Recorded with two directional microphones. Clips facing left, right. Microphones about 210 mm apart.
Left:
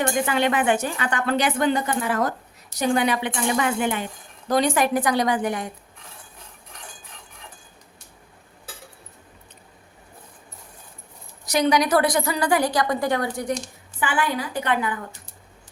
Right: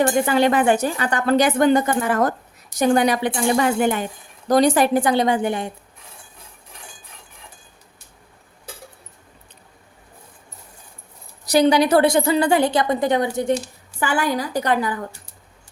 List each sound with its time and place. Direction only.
0.0 s a woman's voice: 35° right (ahead or behind)
11.4 s a woman's voice: 30° right (ahead or behind)
14.0 s speech: 40° right (ahead or behind)